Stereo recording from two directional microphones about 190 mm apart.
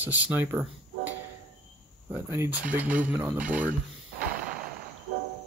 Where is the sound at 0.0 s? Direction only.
10° right (ahead or behind).